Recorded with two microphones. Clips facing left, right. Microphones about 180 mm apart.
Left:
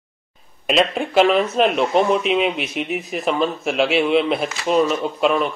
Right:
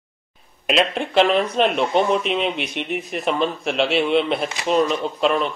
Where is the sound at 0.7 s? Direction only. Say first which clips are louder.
Left 2 dB; centre (ahead or behind).